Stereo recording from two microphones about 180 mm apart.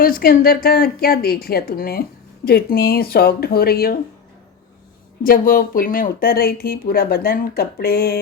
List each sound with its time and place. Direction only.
0.0 s a woman's voice: 55° left (ahead or behind)
5.2 s a woman's voice: 55° left (ahead or behind)